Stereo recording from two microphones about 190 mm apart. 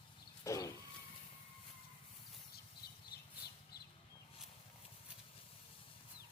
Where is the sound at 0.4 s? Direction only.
15° left (ahead or behind).